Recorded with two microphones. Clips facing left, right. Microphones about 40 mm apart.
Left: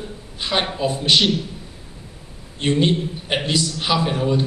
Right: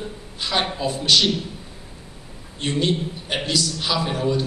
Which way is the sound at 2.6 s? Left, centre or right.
Centre.